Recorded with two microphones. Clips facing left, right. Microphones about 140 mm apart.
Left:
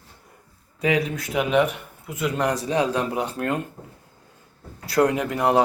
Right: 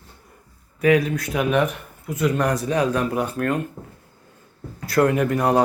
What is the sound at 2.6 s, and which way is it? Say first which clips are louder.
Speech: right 1 dB; 30° left (ahead or behind).